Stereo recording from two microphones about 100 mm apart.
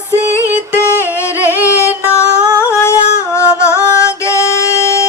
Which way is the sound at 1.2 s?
25° left (ahead or behind).